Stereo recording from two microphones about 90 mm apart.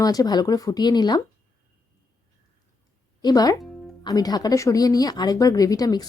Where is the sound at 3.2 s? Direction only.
45° left (ahead or behind).